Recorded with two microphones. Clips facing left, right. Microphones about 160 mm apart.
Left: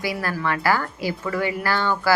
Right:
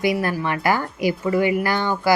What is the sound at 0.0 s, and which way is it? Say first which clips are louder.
A woman's voice: right 4 dB; 20° right (ahead or behind).